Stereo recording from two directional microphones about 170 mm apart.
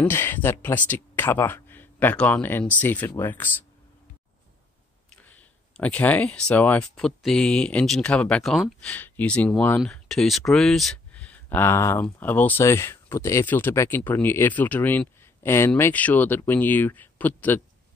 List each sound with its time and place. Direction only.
0.0 s speech: 15° left (ahead or behind)
5.1 s speech: 10° left (ahead or behind)